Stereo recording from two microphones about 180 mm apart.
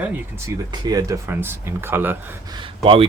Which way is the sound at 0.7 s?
20° right (ahead or behind).